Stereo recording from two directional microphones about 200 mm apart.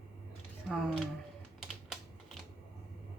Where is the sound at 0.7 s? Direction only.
Centre (ahead or behind).